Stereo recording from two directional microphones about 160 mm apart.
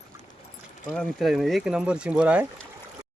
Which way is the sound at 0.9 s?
Centre (ahead or behind).